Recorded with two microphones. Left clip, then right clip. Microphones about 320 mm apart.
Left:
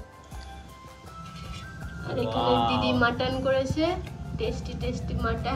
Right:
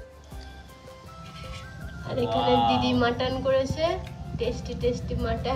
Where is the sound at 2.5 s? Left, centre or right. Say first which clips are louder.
Right 2 dB; right.